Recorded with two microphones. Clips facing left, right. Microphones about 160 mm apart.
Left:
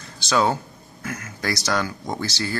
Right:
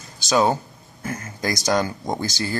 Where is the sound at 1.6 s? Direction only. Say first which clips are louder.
Right 6 dB; 20° right (ahead or behind).